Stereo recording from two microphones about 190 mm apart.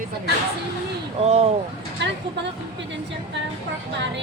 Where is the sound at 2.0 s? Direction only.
65° right (ahead or behind).